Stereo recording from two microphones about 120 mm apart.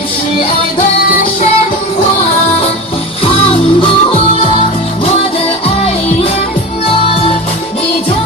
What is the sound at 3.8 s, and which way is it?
Music, 50° left (ahead or behind).